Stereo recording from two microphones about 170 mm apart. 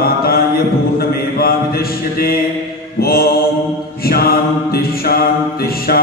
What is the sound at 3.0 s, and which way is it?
Mantra, 65° left (ahead or behind).